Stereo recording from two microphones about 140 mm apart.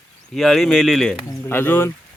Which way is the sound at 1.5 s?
15° left (ahead or behind).